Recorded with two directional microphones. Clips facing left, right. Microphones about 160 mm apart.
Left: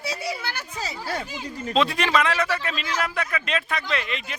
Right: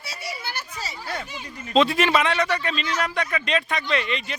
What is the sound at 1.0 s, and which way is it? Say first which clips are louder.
Speech: left 2 dB; 35° left (ahead or behind).